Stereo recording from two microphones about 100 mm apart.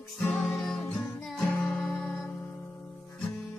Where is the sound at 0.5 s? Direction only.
5° left (ahead or behind).